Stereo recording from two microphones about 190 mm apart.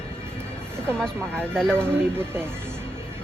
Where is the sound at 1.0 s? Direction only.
5° left (ahead or behind).